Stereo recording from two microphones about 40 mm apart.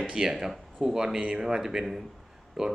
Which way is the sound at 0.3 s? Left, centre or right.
Centre.